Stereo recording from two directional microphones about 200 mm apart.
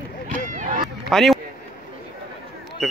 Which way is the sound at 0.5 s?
40° right (ahead or behind).